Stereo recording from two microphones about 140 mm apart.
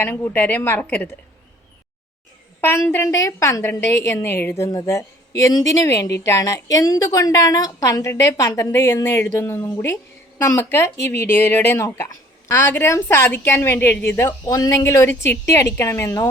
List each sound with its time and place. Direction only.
0.0 s a woman's voice: 15° left (ahead or behind)
2.6 s a woman's voice: 15° left (ahead or behind)